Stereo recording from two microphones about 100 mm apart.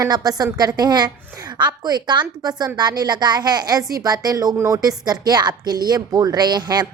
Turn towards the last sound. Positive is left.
turn(degrees=-45)  # may be behind; listen again after turning